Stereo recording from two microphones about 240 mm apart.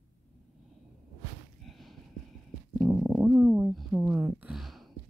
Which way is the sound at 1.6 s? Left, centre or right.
Centre.